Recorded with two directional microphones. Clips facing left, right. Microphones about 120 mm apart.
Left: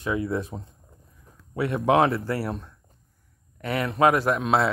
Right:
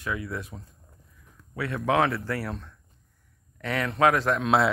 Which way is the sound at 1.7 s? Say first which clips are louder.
Left 4 dB; 20° left (ahead or behind).